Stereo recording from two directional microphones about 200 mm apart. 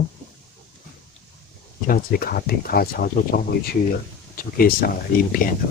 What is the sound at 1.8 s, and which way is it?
Speech, 45° left (ahead or behind).